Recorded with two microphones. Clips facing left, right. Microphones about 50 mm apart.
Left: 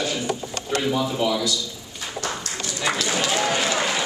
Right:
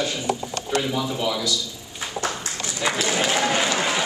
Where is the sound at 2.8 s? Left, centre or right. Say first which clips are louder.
Right 1 dB; centre.